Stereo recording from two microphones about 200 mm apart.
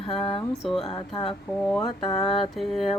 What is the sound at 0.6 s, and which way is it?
Mantra, centre (ahead or behind).